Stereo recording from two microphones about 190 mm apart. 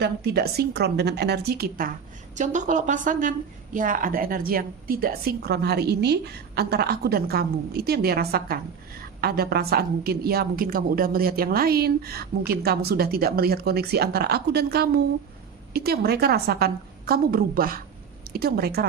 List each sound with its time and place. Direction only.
0.0 s a woman's voice: 60° right (ahead or behind)
2.3 s a woman's voice: 40° right (ahead or behind)